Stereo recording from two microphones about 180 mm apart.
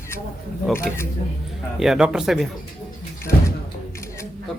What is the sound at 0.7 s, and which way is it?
Speech, 15° left (ahead or behind).